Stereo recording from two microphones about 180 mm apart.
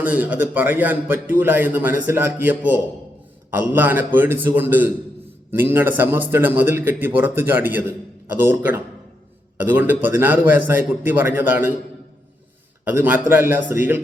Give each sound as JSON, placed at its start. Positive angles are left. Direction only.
{"t": 0.0, "sound": "a man's voice", "side_deg": -10}
{"t": 12.9, "sound": "a man's voice", "side_deg": -10}